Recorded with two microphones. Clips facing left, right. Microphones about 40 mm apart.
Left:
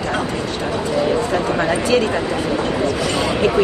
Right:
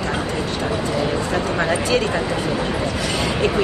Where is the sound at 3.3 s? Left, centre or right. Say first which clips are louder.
Left 4 dB; centre.